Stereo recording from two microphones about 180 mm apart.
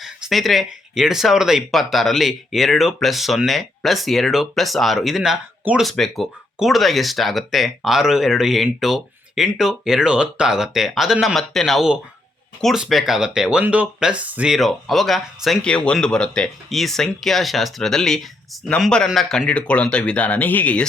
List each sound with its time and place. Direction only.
0.0 s speech: centre (ahead or behind)